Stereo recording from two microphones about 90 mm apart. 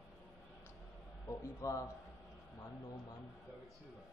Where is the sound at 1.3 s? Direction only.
35° left (ahead or behind).